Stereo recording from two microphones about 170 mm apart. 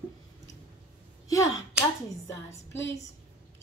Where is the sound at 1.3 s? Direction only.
15° left (ahead or behind).